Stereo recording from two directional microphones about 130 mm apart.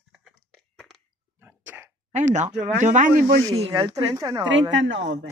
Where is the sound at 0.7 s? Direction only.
Centre (ahead or behind).